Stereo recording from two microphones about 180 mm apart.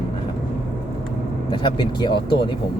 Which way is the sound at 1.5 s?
25° left (ahead or behind).